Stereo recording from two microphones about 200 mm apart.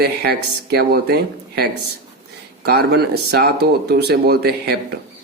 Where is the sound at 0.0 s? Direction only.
55° right (ahead or behind).